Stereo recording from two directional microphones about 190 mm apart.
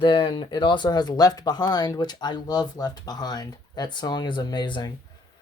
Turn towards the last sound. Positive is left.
turn(degrees=25)  # may be behind; listen again after turning